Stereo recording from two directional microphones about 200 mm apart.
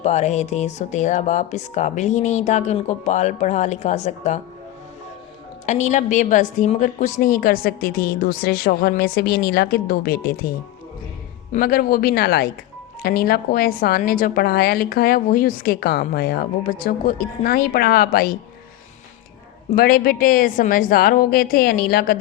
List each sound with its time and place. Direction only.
0.0 s speech: 35° left (ahead or behind)
5.6 s a woman's voice: 35° left (ahead or behind)
11.5 s a woman's voice: 45° left (ahead or behind)
19.7 s a woman's voice: 50° left (ahead or behind)